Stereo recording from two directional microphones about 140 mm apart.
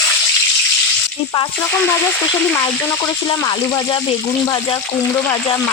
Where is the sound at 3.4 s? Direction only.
30° left (ahead or behind).